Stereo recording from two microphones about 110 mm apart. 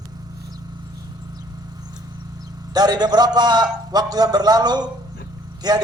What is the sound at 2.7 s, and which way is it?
Speech, 40° right (ahead or behind).